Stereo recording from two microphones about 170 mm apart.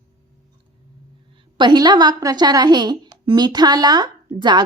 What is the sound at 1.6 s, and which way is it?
A woman's voice, 25° right (ahead or behind).